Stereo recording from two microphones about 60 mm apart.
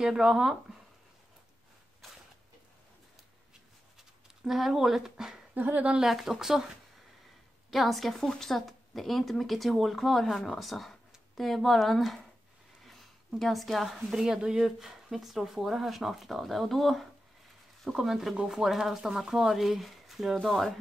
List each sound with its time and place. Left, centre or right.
0.0 s speech: centre
4.5 s speech: centre
5.5 s speech: right
5.9 s speech: centre
7.7 s speech: centre
12.8 s a sound: centre
13.4 s speech: centre